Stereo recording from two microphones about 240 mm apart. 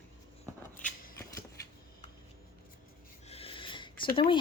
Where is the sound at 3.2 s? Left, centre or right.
Left.